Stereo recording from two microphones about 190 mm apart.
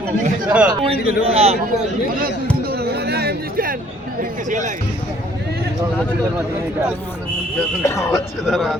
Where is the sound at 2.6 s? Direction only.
55° right (ahead or behind).